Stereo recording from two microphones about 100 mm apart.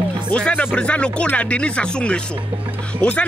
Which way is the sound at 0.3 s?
10° left (ahead or behind).